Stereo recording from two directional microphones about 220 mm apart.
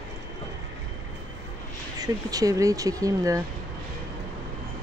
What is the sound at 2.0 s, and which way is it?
Speech, 15° right (ahead or behind).